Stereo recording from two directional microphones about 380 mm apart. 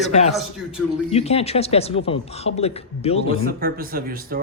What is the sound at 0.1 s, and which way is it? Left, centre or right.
A man's voice, centre.